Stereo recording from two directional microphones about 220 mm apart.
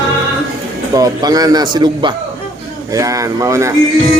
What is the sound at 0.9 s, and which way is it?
A man's voice, 15° right (ahead or behind).